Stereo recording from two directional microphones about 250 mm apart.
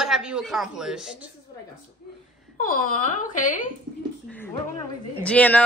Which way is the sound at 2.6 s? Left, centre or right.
Left.